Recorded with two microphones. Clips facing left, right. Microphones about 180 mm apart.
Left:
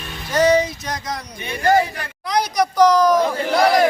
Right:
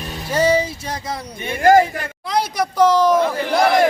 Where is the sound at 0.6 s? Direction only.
30° right (ahead or behind).